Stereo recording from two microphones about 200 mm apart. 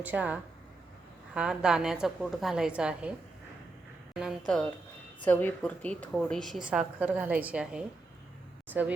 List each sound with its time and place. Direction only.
0.0 s a woman's voice: 10° right (ahead or behind)
4.1 s a woman's voice: 5° right (ahead or behind)